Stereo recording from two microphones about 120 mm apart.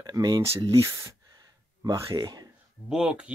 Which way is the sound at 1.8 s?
30° right (ahead or behind).